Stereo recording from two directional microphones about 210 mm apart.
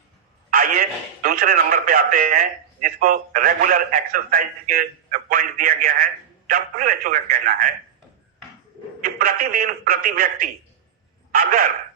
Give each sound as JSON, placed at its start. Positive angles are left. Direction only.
{"t": 0.5, "sound": "a man's voice", "side_deg": -40}
{"t": 9.0, "sound": "a man's voice", "side_deg": -40}